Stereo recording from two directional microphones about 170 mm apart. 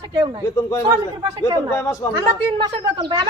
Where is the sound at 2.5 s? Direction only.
25° right (ahead or behind).